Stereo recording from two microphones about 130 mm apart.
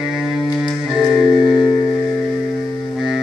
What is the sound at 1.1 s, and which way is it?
Music, centre (ahead or behind).